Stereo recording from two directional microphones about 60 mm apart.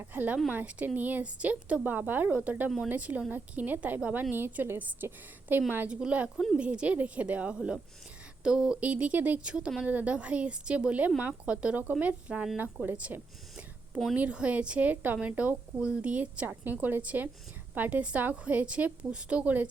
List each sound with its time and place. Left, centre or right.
0.1 s a woman's voice: right
2.6 s speech: centre
2.9 s a woman's voice: right
5.9 s speech: centre
6.3 s speech: centre
6.6 s a woman's voice: centre
13.0 s a sound: right
14.2 s a woman's voice: right